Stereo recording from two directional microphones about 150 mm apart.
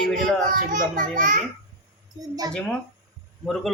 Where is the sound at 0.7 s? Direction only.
65° right (ahead or behind).